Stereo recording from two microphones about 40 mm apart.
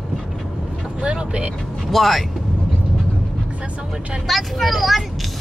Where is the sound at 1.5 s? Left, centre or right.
Centre.